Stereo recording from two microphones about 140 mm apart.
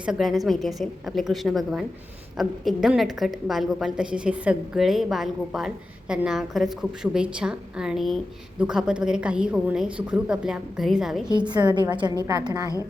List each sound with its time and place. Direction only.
0.0 s a woman's voice: 5° right (ahead or behind)
11.3 s a woman's voice: 30° right (ahead or behind)